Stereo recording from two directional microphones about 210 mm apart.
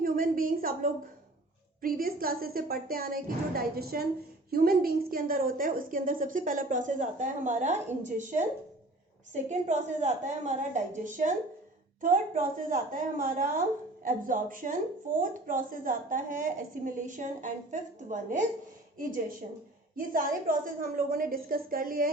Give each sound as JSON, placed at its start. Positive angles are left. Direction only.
{"t": 0.0, "sound": "a woman's voice", "side_deg": -40}
{"t": 20.0, "sound": "speech", "side_deg": -40}